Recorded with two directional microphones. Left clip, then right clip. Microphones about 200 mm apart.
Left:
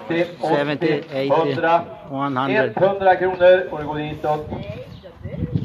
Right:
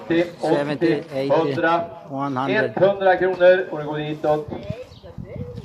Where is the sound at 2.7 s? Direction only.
45° right (ahead or behind).